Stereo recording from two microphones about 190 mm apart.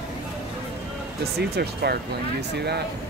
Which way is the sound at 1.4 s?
60° right (ahead or behind).